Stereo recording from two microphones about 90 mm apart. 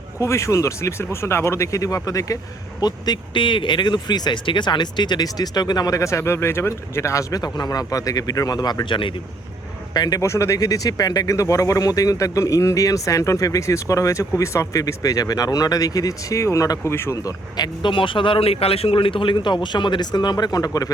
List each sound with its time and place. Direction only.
0.2 s speech: 35° left (ahead or behind)
2.8 s speech: 60° left (ahead or behind)
9.9 s speech: 45° left (ahead or behind)
16.9 s speech: 25° left (ahead or behind)
17.8 s a man's voice: 70° left (ahead or behind); by 20.9 s 45° left (ahead or behind)